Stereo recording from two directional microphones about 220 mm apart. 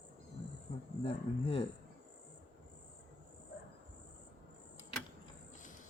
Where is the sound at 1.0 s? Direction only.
25° left (ahead or behind).